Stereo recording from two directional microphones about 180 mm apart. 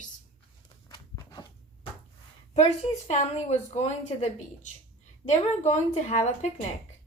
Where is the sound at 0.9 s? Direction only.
25° left (ahead or behind).